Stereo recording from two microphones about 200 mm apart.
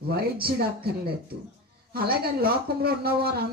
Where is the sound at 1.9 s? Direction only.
50° right (ahead or behind).